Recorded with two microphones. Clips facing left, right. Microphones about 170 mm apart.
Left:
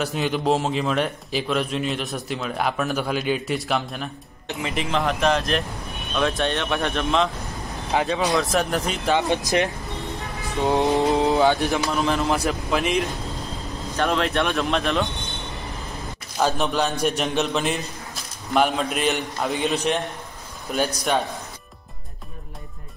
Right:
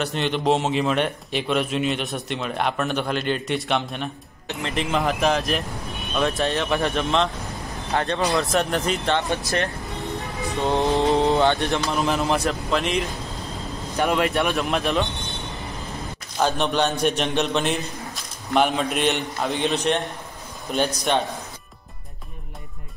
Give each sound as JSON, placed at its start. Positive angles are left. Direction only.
{"t": 0.0, "sound": "a man's voice", "side_deg": 5}
{"t": 9.2, "sound": "speech", "side_deg": 20}
{"t": 11.0, "sound": "a man's voice", "side_deg": 0}
{"t": 13.9, "sound": "a man's voice", "side_deg": -10}
{"t": 16.3, "sound": "a man's voice", "side_deg": 0}